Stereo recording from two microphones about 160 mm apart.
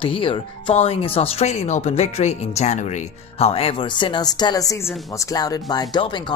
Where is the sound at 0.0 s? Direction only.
35° left (ahead or behind).